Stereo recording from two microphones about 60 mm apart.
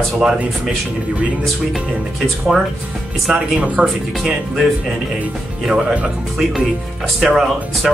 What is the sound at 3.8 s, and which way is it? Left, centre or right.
Speech, centre.